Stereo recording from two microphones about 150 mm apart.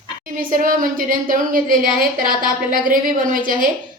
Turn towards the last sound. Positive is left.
turn(degrees=-65)  # may be behind; listen again after turning